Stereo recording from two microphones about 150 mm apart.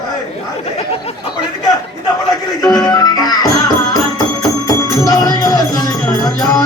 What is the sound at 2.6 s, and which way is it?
Music, 25° left (ahead or behind).